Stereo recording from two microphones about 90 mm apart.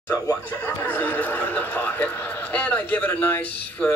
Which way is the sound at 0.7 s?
20° left (ahead or behind).